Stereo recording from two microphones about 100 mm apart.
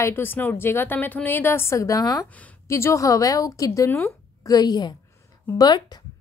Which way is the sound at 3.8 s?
20° left (ahead or behind).